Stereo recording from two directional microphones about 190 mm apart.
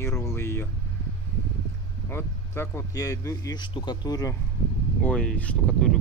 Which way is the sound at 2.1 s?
10° left (ahead or behind).